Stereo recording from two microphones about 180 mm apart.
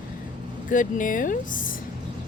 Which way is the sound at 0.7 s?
45° left (ahead or behind).